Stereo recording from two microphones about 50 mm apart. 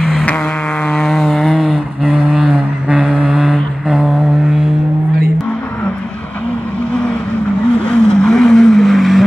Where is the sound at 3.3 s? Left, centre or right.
Centre.